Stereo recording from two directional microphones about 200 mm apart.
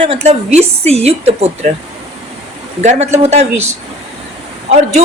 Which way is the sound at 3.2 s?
35° right (ahead or behind).